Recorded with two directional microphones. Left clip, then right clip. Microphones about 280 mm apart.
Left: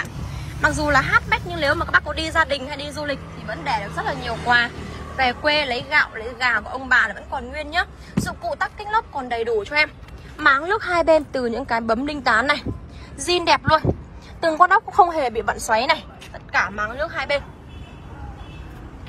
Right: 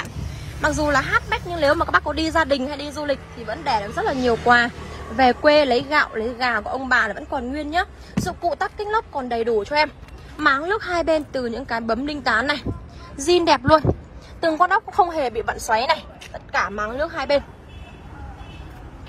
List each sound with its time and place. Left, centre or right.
0.0 s speech: centre
4.7 s a woman's voice: right